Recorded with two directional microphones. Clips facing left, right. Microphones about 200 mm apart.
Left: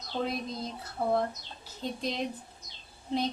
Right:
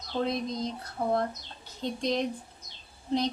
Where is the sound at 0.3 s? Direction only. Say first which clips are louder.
Right 4 dB; 5° left (ahead or behind).